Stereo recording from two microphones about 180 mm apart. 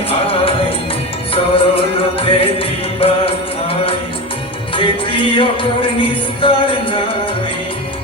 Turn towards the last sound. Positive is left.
turn(degrees=30)  # may be behind; listen again after turning